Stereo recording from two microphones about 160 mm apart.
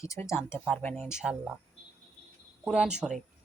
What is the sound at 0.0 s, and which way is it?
Speech, 20° left (ahead or behind).